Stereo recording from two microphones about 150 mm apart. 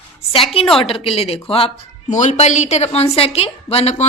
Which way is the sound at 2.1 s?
50° left (ahead or behind).